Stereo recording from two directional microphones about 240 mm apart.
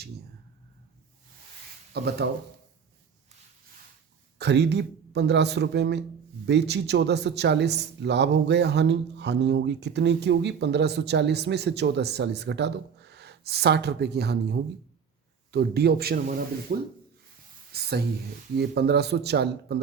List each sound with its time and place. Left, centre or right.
1.9 s speech: right
4.4 s a man's voice: right